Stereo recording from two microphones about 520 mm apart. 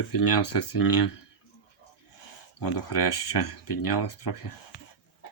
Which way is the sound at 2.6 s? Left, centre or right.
Left.